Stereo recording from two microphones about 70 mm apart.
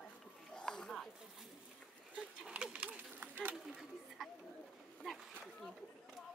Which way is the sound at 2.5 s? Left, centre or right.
Centre.